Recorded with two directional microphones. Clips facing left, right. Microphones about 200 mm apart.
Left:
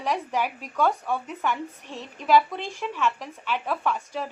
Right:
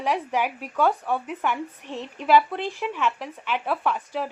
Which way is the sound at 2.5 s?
15° left (ahead or behind).